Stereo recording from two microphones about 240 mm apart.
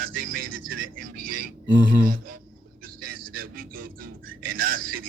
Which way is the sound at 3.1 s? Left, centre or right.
Right.